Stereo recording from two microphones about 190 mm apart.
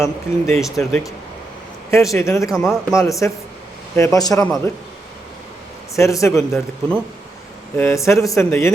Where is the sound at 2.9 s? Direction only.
15° left (ahead or behind).